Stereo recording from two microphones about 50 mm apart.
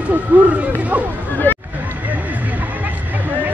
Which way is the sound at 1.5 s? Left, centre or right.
Left.